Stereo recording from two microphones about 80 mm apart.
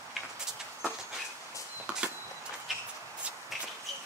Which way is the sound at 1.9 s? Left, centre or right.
Centre.